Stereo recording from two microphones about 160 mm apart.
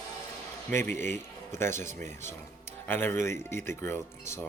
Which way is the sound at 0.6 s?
15° left (ahead or behind).